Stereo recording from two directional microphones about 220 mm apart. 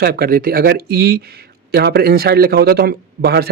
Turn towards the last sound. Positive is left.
turn(degrees=-45)  # may be behind; listen again after turning